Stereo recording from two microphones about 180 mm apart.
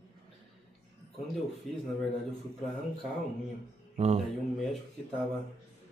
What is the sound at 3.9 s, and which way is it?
Speech, 35° right (ahead or behind).